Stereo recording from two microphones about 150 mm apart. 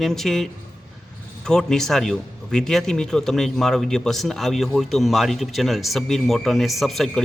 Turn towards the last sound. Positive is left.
turn(degrees=0)  # may be behind; listen again after turning